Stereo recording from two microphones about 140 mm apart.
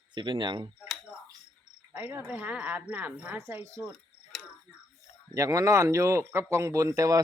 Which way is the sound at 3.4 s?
20° right (ahead or behind).